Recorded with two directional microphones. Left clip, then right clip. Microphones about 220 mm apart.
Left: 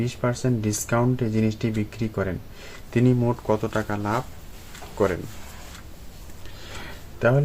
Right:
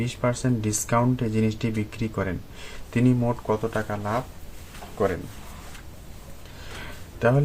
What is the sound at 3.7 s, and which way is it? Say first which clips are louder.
Speech: left 2 dB; 40° left (ahead or behind).